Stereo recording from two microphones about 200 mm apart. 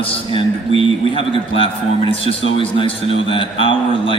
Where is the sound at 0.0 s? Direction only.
25° left (ahead or behind).